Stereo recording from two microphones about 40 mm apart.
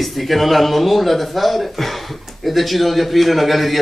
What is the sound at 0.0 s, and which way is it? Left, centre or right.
Speech, centre.